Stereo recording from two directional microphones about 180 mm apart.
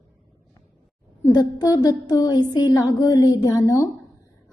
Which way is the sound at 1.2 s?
20° left (ahead or behind).